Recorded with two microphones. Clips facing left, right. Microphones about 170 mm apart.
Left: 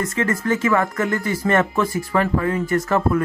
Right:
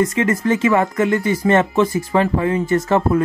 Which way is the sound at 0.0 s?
20° right (ahead or behind).